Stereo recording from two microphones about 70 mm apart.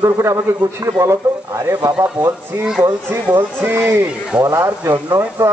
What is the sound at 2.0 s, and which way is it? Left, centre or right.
Speech, right.